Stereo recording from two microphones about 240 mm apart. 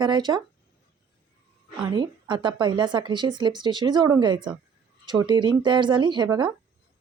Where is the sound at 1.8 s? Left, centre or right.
Centre.